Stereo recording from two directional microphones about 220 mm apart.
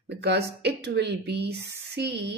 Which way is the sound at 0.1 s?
50° right (ahead or behind).